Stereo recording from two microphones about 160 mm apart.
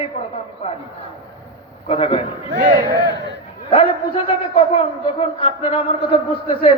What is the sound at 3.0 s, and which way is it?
Speech, 90° right.